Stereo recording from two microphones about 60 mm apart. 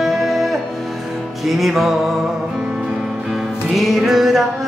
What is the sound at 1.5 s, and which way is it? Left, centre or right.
Music, centre.